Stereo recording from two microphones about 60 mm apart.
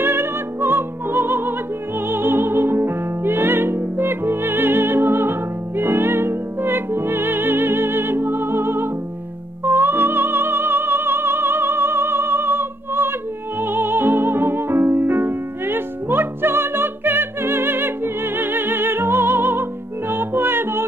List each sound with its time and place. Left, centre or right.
0.0 s music: right